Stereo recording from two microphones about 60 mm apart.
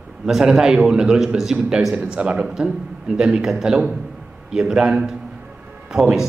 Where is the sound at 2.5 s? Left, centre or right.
Centre.